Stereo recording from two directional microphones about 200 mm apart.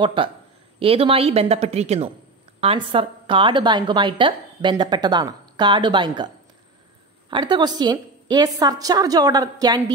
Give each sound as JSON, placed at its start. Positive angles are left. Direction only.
{"t": 0.0, "sound": "a woman's voice", "side_deg": -25}